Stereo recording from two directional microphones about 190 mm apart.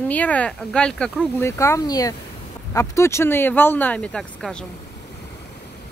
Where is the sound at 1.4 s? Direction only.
15° left (ahead or behind).